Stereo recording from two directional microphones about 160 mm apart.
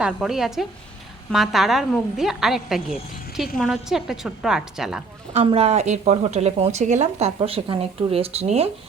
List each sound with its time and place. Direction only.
0.0 s a woman's voice: 5° right (ahead or behind)
5.3 s speech: 35° right (ahead or behind)